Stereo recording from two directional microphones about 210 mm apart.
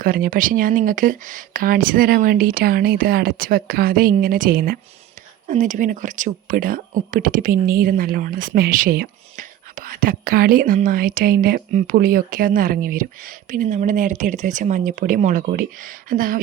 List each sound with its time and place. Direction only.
0.0 s speech: 40° right (ahead or behind)